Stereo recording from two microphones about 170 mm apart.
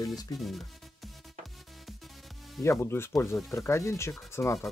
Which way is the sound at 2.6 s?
15° left (ahead or behind).